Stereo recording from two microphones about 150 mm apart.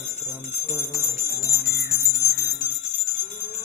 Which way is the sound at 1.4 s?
20° left (ahead or behind).